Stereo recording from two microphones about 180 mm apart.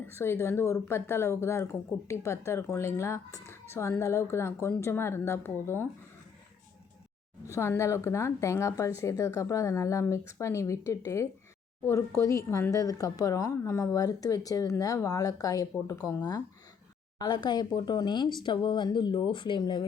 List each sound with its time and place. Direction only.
0.0 s a woman's voice: 15° left (ahead or behind)
7.5 s a woman's voice: 15° left (ahead or behind)